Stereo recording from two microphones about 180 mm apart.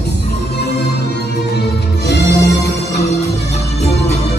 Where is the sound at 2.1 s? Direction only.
70° left (ahead or behind).